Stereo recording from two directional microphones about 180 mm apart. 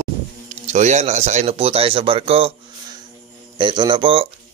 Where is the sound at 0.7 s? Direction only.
40° right (ahead or behind).